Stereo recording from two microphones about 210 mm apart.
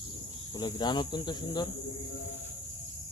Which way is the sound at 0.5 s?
20° left (ahead or behind).